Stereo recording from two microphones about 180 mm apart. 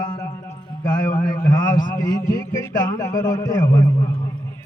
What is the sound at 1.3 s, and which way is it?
A man's voice, 20° left (ahead or behind).